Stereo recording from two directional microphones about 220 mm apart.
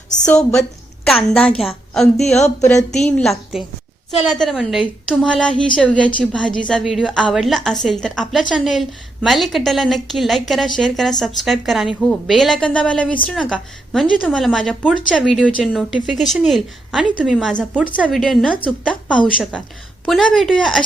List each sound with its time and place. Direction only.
1.0 s a woman's voice: centre (ahead or behind)
2.2 s speech: 30° left (ahead or behind)
2.6 s a woman's voice: 5° left (ahead or behind)